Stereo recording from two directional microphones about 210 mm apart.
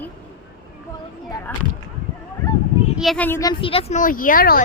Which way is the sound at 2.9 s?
Centre (ahead or behind).